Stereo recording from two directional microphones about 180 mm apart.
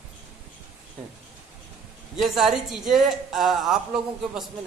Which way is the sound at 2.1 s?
Centre (ahead or behind).